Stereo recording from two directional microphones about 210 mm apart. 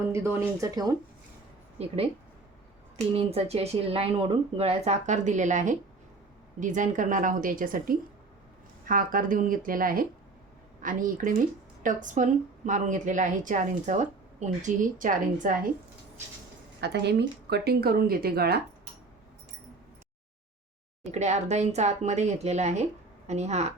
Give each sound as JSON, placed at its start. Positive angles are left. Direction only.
{"t": 0.0, "sound": "speech", "side_deg": -15}
{"t": 1.8, "sound": "speech", "side_deg": -30}
{"t": 3.2, "sound": "a woman's voice", "side_deg": -30}
{"t": 16.8, "sound": "speech", "side_deg": -55}
{"t": 21.0, "sound": "a woman's voice", "side_deg": -35}